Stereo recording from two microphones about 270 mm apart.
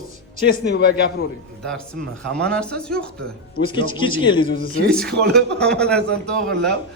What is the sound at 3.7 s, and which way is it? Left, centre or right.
Speech, centre.